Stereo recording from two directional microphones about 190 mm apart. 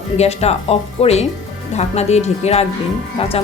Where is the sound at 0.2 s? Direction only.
35° left (ahead or behind).